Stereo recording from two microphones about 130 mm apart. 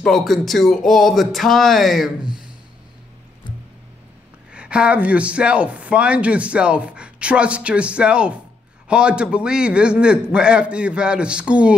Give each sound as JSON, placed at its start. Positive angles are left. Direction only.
{"t": 0.0, "sound": "speech", "side_deg": 0}
{"t": 4.5, "sound": "a man's voice", "side_deg": -10}